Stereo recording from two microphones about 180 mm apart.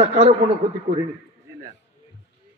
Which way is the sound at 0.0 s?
35° right (ahead or behind).